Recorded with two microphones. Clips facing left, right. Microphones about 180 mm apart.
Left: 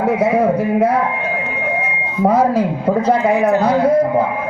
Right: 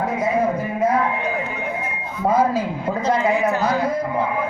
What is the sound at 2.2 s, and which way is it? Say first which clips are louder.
Speech: left 5 dB; 70° left (ahead or behind).